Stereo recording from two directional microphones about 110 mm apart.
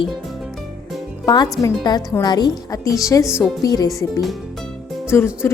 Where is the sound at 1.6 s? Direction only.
40° left (ahead or behind).